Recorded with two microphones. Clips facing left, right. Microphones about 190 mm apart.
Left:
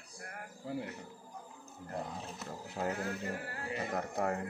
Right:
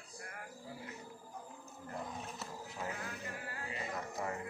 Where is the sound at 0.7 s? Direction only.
65° left (ahead or behind).